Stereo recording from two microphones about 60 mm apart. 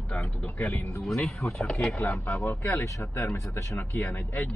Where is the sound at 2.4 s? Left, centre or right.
Left.